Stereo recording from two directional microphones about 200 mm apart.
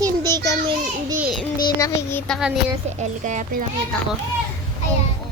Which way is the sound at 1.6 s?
15° left (ahead or behind).